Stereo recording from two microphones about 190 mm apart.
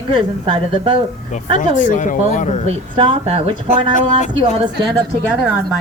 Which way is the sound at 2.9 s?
30° right (ahead or behind).